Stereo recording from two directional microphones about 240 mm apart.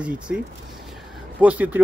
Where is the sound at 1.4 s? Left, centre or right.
Centre.